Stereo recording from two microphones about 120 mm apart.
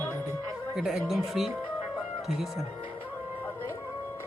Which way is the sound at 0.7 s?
5° right (ahead or behind).